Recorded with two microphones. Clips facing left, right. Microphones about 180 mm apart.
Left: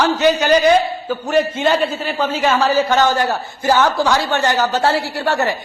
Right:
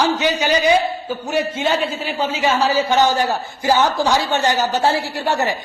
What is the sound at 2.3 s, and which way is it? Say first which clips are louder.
Speech: left 2 dB; 50° left (ahead or behind).